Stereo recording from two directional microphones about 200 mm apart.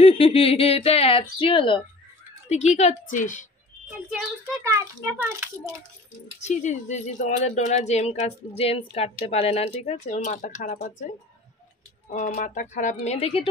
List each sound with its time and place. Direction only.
0.0 s speech: 30° left (ahead or behind)
4.6 s a child's voice: 10° right (ahead or behind)
6.4 s speech: 35° left (ahead or behind)
12.1 s speech: 35° left (ahead or behind)